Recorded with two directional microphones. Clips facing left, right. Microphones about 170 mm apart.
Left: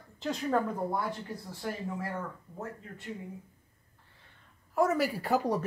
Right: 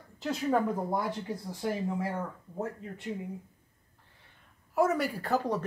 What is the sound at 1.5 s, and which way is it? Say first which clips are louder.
Speech: right 5 dB; 15° right (ahead or behind).